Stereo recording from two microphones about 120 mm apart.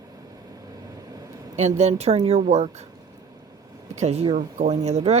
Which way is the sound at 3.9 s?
65° right (ahead or behind).